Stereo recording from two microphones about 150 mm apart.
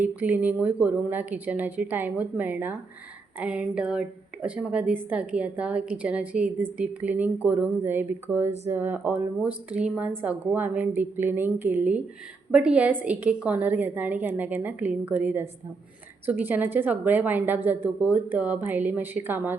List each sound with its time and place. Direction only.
0.0 s speech: 10° right (ahead or behind)